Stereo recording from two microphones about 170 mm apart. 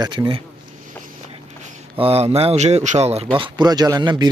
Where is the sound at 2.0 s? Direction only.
35° right (ahead or behind).